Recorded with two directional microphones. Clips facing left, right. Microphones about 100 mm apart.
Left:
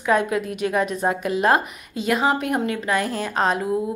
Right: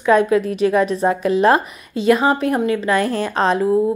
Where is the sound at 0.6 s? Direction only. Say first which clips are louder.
Right 6 dB; 15° left (ahead or behind).